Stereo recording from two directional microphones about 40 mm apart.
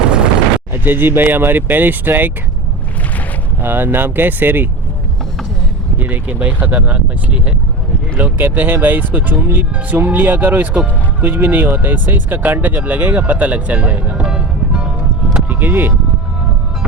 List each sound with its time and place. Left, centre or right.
0.7 s speech: right
3.6 s speech: right
6.0 s speech: right
8.2 s speech: right
14.3 s music: centre
15.4 s speech: right